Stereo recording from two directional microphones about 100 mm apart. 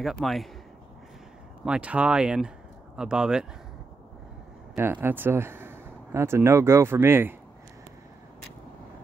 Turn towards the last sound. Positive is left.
turn(degrees=-20)  # may be behind; listen again after turning